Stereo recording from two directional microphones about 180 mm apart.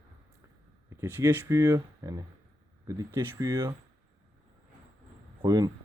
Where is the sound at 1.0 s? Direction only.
15° right (ahead or behind).